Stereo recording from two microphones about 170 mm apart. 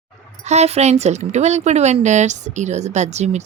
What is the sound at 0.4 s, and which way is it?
Speech, 40° right (ahead or behind).